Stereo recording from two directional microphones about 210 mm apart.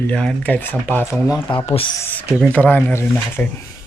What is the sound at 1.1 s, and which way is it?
Speech, centre (ahead or behind).